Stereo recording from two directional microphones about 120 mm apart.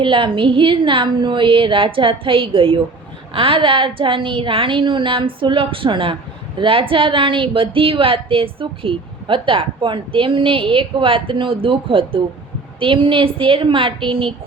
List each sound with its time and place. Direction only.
0.0 s a woman's voice: 45° right (ahead or behind)